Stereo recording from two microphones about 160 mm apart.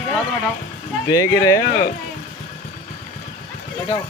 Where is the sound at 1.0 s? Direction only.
20° left (ahead or behind).